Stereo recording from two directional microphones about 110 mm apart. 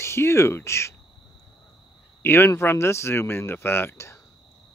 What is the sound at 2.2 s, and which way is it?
Speech, 20° left (ahead or behind).